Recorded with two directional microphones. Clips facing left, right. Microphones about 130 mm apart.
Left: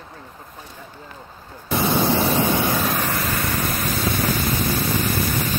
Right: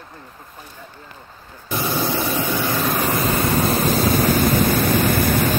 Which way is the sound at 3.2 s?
25° right (ahead or behind).